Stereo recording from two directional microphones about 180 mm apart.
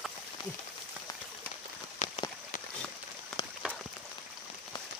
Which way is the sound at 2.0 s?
40° left (ahead or behind).